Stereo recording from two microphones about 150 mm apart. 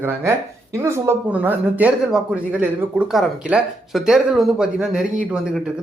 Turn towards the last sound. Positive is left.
turn(degrees=-5)  # may be behind; listen again after turning